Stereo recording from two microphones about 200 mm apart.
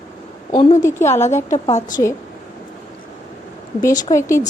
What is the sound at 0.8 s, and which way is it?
Speech, 15° left (ahead or behind).